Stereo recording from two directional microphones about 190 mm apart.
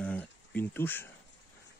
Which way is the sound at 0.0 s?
5° left (ahead or behind).